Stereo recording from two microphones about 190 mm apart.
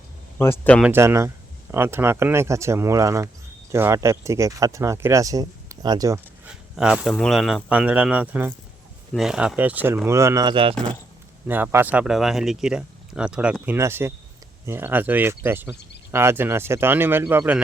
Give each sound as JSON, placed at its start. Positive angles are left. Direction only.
{"t": 0.3, "sound": "speech", "side_deg": 10}
{"t": 0.8, "sound": "speech", "side_deg": -10}
{"t": 6.5, "sound": "speech", "side_deg": -5}
{"t": 11.4, "sound": "speech", "side_deg": -10}